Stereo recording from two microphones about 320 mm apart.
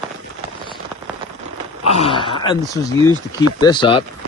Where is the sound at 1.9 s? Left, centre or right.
Centre.